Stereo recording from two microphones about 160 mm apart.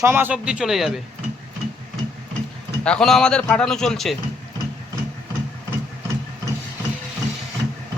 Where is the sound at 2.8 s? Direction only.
5° left (ahead or behind).